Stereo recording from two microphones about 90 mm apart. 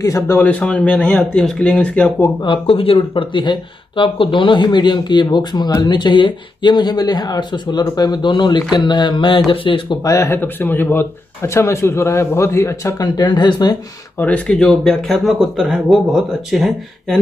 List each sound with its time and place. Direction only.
0.0 s a man's voice: 35° left (ahead or behind)
0.4 s speech: 20° left (ahead or behind)
2.4 s speech: 80° left
10.0 s a man's voice: 35° left (ahead or behind)
10.3 s speech: 20° left (ahead or behind)
13.0 s speech: 55° left (ahead or behind)
14.1 s speech: 15° left (ahead or behind); by 17.2 s centre (ahead or behind)